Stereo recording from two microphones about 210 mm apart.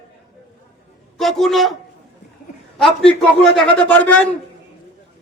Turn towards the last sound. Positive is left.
turn(degrees=10)  # may be behind; listen again after turning